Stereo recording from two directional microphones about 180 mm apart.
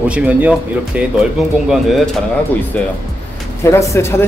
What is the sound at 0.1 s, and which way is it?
A man's voice, 10° right (ahead or behind).